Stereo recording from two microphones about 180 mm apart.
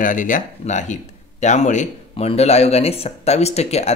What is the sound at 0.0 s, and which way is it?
Speech, 45° left (ahead or behind).